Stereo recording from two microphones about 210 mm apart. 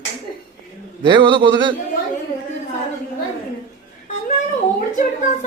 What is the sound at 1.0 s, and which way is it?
Speech, 20° right (ahead or behind).